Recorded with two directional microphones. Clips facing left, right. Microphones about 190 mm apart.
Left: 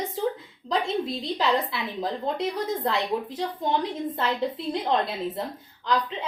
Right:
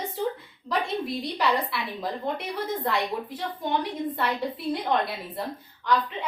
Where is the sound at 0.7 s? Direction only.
25° left (ahead or behind).